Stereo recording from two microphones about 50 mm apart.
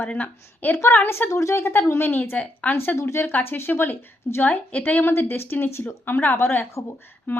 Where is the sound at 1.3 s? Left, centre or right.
Left.